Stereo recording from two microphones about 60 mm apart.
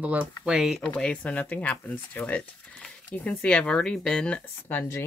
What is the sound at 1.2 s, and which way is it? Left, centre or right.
Speech, left.